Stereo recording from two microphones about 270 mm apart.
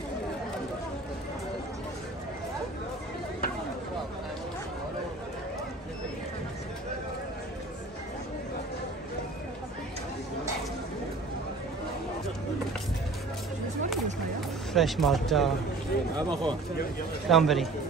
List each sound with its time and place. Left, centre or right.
14.7 s speech: centre
16.2 s speech: centre
17.3 s speech: centre